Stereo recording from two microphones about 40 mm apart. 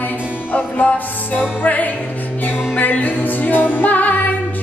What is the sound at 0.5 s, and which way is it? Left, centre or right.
Music, left.